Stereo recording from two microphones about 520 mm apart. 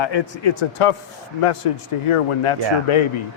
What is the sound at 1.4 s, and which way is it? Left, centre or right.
Speech, left.